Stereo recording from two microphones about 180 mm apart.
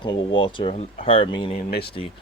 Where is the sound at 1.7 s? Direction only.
65° left (ahead or behind).